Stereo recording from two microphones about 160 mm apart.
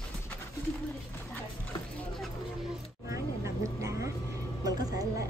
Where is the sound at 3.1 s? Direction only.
20° right (ahead or behind).